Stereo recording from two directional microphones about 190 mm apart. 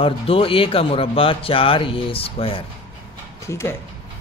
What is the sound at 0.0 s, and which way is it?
Speech, 30° left (ahead or behind).